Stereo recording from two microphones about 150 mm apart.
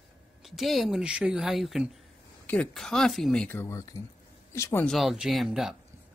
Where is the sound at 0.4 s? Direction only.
Centre (ahead or behind); by 4.8 s 20° left (ahead or behind).